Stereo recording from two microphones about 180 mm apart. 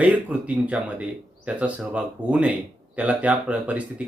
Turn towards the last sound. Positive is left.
turn(degrees=-10)  # may be behind; listen again after turning